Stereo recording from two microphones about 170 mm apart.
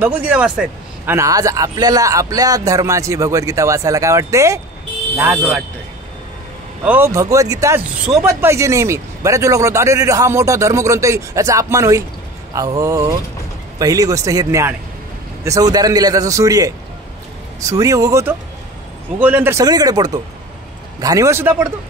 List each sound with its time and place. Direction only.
0.0 s a man's voice: 10° right (ahead or behind)
6.8 s a man's voice: 10° right (ahead or behind)